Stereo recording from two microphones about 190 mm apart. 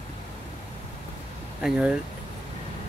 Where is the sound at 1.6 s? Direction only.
5° right (ahead or behind).